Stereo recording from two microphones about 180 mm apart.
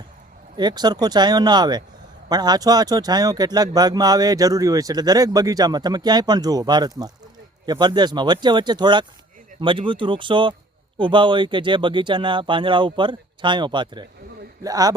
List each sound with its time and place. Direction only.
0.5 s speech: 25° right (ahead or behind)